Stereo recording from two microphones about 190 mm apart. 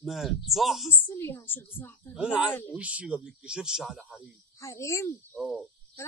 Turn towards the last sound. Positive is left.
turn(degrees=0)  # may be behind; listen again after turning